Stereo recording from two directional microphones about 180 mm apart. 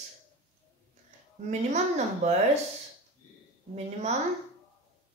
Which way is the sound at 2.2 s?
40° right (ahead or behind).